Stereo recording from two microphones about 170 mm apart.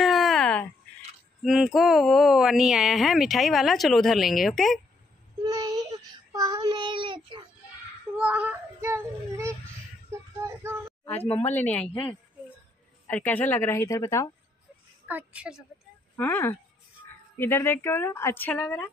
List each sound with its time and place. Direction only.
0.0 s a sound: centre (ahead or behind)
1.4 s speech: centre (ahead or behind)
5.4 s child singing: 20° right (ahead or behind)
8.2 s child singing: 5° right (ahead or behind)
11.5 s a woman's voice: 10° left (ahead or behind)
13.0 s a woman's voice: 10° left (ahead or behind)
15.0 s a woman's voice: 10° right (ahead or behind)
16.2 s a woman's voice: 15° left (ahead or behind)